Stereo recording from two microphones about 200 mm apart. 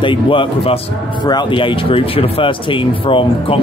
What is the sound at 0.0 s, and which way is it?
Speech, 25° left (ahead or behind).